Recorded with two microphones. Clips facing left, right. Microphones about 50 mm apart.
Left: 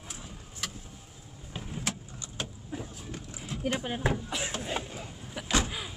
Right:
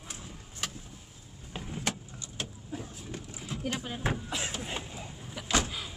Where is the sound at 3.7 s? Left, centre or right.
Left.